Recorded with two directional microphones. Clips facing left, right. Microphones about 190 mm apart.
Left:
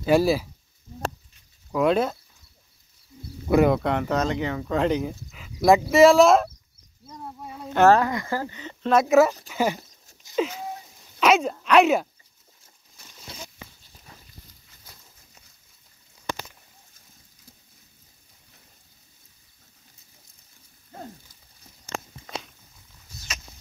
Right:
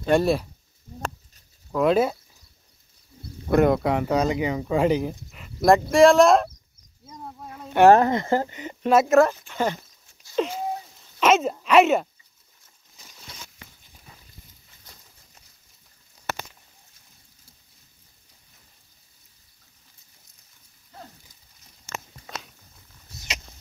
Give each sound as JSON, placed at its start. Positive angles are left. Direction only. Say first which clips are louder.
{"t": 0.0, "sound": "speech", "louder": "left 1 dB", "side_deg": 5}
{"t": 1.7, "sound": "speech", "louder": "right 1 dB", "side_deg": 0}
{"t": 3.4, "sound": "speech", "louder": "even", "side_deg": 0}
{"t": 7.4, "sound": "a sound", "louder": "left 2 dB", "side_deg": 5}
{"t": 7.7, "sound": "speech", "louder": "right 3 dB", "side_deg": -15}
{"t": 8.9, "sound": "speech", "louder": "even", "side_deg": 0}
{"t": 11.1, "sound": "a sound", "louder": "even", "side_deg": 0}
{"t": 11.5, "sound": "speech", "louder": "right 1 dB", "side_deg": -5}